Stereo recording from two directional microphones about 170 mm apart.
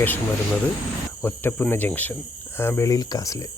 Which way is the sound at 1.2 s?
10° left (ahead or behind).